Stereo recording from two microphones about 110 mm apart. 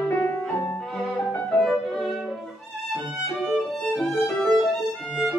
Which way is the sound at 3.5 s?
Centre (ahead or behind).